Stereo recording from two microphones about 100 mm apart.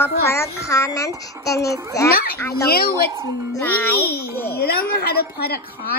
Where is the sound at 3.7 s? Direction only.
20° left (ahead or behind).